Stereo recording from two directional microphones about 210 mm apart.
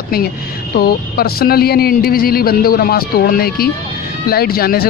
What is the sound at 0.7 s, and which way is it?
Speech, 45° left (ahead or behind).